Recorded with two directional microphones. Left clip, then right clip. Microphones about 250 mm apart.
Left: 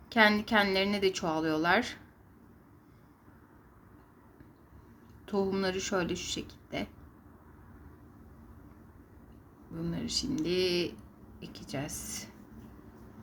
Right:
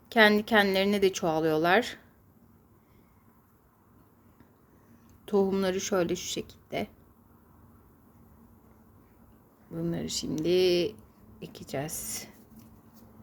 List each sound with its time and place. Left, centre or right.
0.1 s a woman's voice: right
5.2 s a woman's voice: right
9.7 s a woman's voice: right